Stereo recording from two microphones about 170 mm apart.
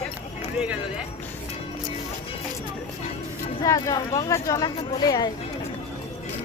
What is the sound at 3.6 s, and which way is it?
Speech, 20° left (ahead or behind).